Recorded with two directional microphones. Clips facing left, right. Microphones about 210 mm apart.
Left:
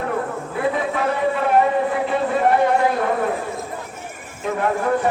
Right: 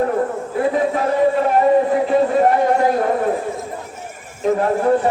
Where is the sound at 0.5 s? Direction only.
40° right (ahead or behind).